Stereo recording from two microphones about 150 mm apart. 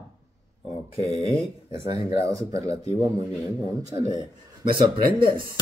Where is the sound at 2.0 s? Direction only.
20° right (ahead or behind).